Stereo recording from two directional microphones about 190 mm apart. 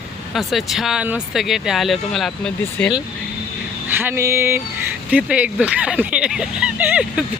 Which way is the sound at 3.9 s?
15° right (ahead or behind).